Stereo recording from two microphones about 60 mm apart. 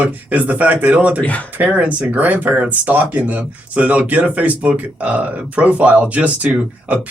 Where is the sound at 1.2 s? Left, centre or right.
Left.